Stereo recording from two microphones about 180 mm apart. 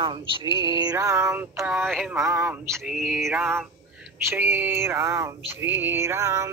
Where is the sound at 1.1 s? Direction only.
10° right (ahead or behind).